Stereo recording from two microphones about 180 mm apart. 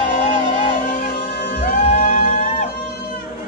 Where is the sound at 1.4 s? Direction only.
70° left (ahead or behind).